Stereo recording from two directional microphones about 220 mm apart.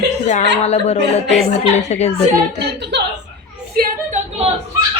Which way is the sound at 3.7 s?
30° right (ahead or behind).